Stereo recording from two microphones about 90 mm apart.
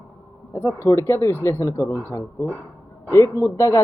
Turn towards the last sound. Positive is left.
turn(degrees=35)  # may be behind; listen again after turning